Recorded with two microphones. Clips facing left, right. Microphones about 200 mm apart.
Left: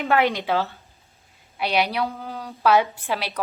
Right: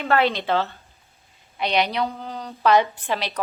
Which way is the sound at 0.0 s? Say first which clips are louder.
Even; 15° left (ahead or behind).